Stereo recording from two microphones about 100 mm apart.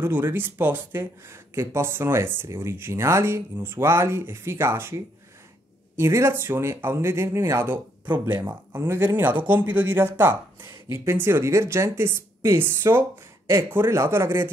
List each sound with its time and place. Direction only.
0.0 s speech: 25° right (ahead or behind)